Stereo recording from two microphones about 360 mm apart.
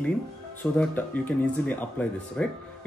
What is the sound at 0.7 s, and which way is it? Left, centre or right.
Speech, centre.